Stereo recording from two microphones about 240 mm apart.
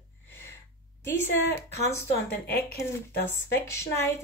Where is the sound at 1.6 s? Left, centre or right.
Centre.